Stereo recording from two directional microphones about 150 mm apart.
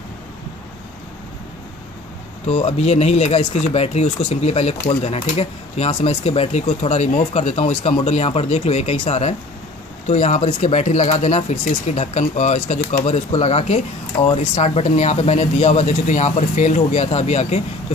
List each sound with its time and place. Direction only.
2.4 s speech: 45° left (ahead or behind)